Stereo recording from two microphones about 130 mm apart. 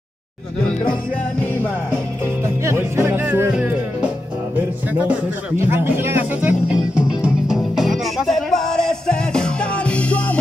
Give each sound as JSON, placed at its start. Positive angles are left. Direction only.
{"t": 1.4, "sound": "music", "side_deg": 15}
{"t": 2.4, "sound": "music", "side_deg": -20}